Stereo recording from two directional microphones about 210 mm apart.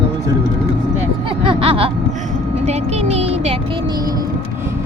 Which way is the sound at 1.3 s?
25° right (ahead or behind).